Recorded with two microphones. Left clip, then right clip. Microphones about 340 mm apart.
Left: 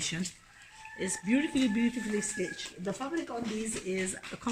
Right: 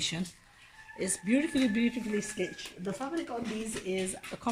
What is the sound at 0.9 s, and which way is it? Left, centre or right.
Speech, centre.